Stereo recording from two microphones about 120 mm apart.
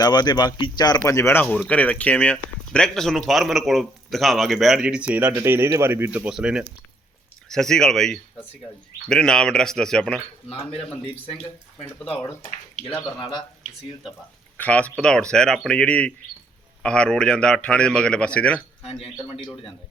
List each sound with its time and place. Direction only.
0.0 s speech: 35° left (ahead or behind); by 6.7 s 5° right (ahead or behind)
7.4 s speech: 5° left (ahead or behind)
10.6 s speech: 50° left (ahead or behind)
14.6 s a man's voice: 10° left (ahead or behind)